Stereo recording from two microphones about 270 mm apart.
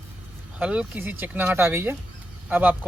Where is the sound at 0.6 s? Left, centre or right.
Centre.